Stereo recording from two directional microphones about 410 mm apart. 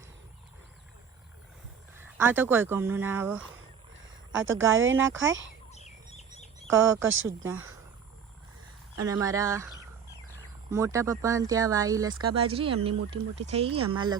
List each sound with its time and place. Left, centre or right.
2.0 s speech: centre
4.3 s speech: right
5.7 s bird: centre
7.0 s speech: right
9.0 s speech: centre